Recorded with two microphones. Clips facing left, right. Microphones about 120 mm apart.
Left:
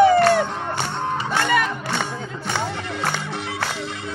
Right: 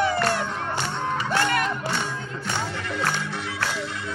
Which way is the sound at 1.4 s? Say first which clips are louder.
Left 3 dB; 85° left.